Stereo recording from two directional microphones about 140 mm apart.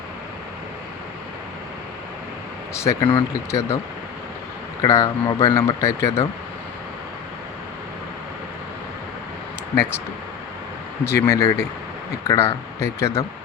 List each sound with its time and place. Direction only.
2.7 s speech: 20° left (ahead or behind)
3.0 s speech: 35° left (ahead or behind)
3.5 s speech: 20° left (ahead or behind)
4.8 s speech: 20° left (ahead or behind)
11.0 s speech: 20° left (ahead or behind)